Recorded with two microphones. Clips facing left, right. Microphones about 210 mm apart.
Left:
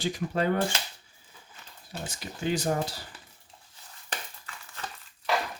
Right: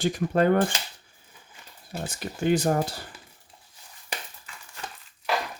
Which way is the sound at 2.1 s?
55° right (ahead or behind).